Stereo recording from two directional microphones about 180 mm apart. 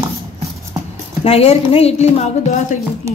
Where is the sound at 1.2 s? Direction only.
35° left (ahead or behind).